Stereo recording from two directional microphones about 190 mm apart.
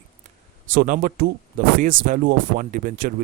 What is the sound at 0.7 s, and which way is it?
Speech, 45° right (ahead or behind).